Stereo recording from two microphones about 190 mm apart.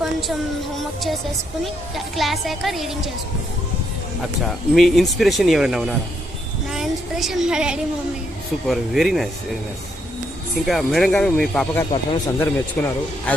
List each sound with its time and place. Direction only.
0.0 s a sound: centre (ahead or behind)
0.8 s speech: centre (ahead or behind)
4.2 s speech: centre (ahead or behind)
6.7 s child singing: centre (ahead or behind)
8.6 s speech: centre (ahead or behind)
10.7 s a man's voice: centre (ahead or behind)